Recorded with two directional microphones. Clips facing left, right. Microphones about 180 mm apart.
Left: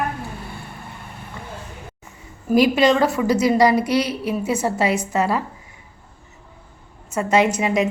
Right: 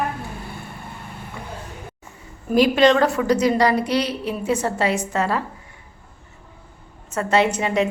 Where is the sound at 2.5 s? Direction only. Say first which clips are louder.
Even; 10° left (ahead or behind).